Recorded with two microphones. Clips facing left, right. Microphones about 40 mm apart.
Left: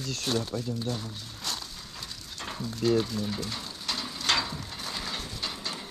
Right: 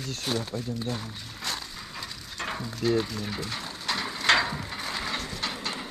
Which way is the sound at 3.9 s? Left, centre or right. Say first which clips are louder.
Right 5 dB; right.